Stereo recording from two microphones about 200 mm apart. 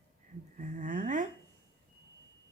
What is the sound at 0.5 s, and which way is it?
Speech, 40° right (ahead or behind).